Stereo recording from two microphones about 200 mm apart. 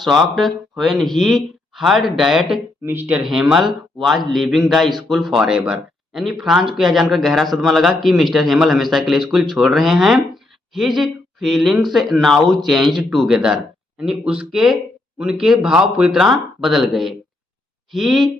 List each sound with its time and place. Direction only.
0.0 s speech: centre (ahead or behind)